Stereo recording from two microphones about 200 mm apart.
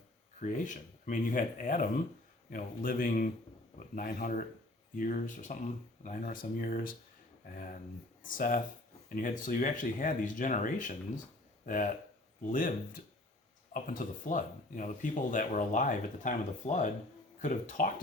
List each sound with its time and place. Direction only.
0.4 s speech: 40° left (ahead or behind)